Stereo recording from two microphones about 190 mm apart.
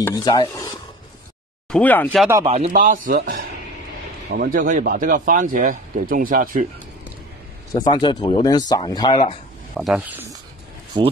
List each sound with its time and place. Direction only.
0.0 s speech: 20° left (ahead or behind)
1.7 s speech: 10° left (ahead or behind)
2.4 s a man's voice: 35° right (ahead or behind)
7.7 s speech: 20° left (ahead or behind)
9.8 s speech: 5° right (ahead or behind)
10.9 s speech: 25° right (ahead or behind)